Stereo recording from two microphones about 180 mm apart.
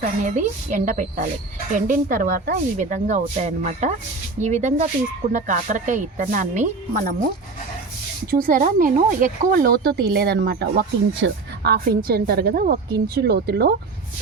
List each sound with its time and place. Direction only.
0.0 s speech: 45° right (ahead or behind)
8.3 s speech: 50° right (ahead or behind)